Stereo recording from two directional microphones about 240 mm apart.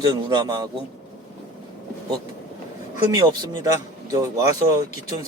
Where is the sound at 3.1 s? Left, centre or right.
Centre.